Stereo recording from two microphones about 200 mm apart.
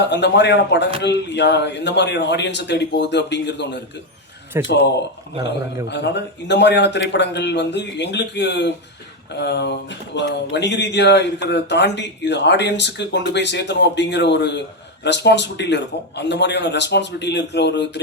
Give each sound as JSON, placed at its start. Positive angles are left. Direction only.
{"t": 0.0, "sound": "speech", "side_deg": 60}
{"t": 4.5, "sound": "speech", "side_deg": -10}
{"t": 5.9, "sound": "speech", "side_deg": 60}